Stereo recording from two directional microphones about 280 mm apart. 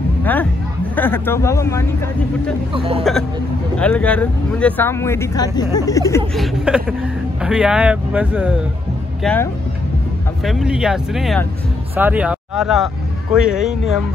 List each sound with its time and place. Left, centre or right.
0.2 s speech: centre
2.7 s speech: centre
3.0 s speech: centre
6.3 s speech: centre